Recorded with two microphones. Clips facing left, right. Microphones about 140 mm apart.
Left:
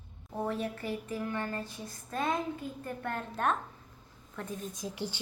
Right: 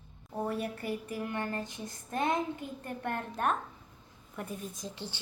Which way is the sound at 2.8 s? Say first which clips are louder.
Right 2 dB; 20° right (ahead or behind).